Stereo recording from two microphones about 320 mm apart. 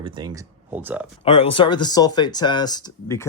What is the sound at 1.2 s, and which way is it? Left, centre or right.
Speech, centre.